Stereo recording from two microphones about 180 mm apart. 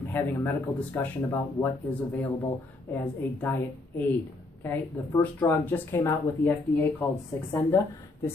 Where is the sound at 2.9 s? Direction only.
10° left (ahead or behind).